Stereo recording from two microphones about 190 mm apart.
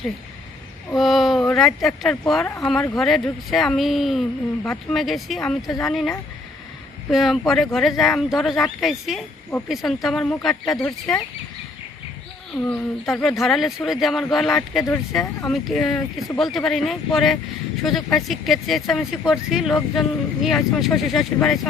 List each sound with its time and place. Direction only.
0.9 s speech: centre (ahead or behind)
10.8 s speech: 20° left (ahead or behind)
12.6 s speech: 10° left (ahead or behind)